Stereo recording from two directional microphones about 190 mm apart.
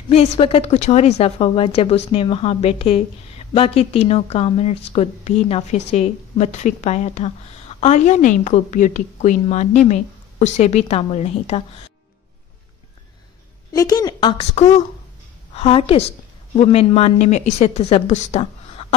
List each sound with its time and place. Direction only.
0.1 s a woman's voice: 30° left (ahead or behind)
13.7 s a woman's voice: 20° left (ahead or behind)